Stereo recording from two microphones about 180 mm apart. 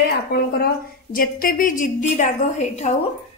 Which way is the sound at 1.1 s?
50° left (ahead or behind).